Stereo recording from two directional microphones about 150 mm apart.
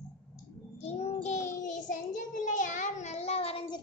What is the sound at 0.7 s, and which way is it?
Child singing, 45° left (ahead or behind).